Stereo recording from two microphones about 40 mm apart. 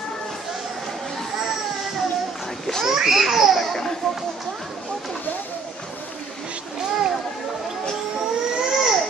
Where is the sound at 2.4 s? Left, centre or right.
Centre.